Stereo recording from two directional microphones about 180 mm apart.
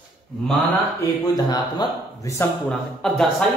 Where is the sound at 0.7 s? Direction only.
20° left (ahead or behind).